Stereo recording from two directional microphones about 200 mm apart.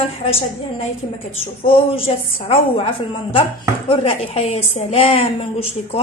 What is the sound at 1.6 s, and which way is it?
A woman's voice, 30° left (ahead or behind).